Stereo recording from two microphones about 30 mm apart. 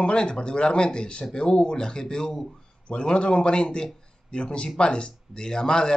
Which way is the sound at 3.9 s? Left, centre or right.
Left.